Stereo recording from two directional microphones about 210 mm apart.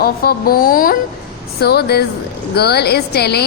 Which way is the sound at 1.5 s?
50° left (ahead or behind).